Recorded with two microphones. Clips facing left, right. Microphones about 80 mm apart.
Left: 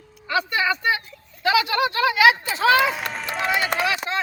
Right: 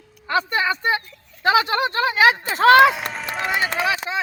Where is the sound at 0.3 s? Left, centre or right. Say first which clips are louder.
Right 1 dB; right.